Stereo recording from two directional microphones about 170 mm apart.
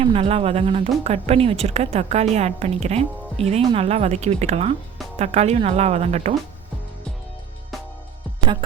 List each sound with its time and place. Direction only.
0.0 s speech: 35° right (ahead or behind)